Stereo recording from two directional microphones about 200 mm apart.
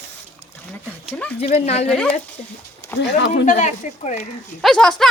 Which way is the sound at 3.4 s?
35° left (ahead or behind).